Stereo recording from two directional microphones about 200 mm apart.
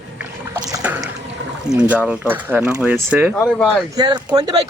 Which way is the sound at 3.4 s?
5° left (ahead or behind).